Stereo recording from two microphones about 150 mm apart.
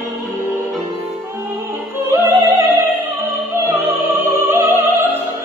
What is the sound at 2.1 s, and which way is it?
Music, 20° right (ahead or behind).